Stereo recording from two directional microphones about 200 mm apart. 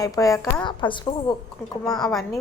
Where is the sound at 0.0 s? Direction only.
15° left (ahead or behind).